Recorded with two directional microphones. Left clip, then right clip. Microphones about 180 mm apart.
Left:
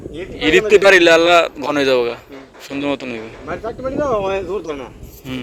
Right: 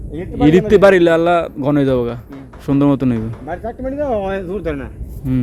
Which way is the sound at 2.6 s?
30° right (ahead or behind).